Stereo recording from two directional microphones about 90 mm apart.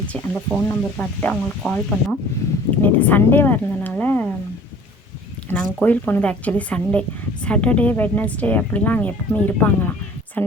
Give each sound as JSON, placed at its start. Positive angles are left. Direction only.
{"t": 0.1, "sound": "speech", "side_deg": 15}
{"t": 2.8, "sound": "speech", "side_deg": 25}
{"t": 5.5, "sound": "speech", "side_deg": 20}
{"t": 10.4, "sound": "a sound", "side_deg": 20}